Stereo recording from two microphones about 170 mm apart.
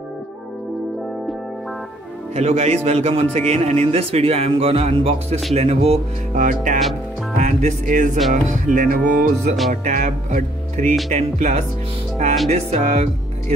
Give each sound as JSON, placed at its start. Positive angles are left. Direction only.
{"t": 2.3, "sound": "a man's voice", "side_deg": -40}
{"t": 7.3, "sound": "music", "side_deg": -45}
{"t": 12.4, "sound": "a man's voice", "side_deg": -40}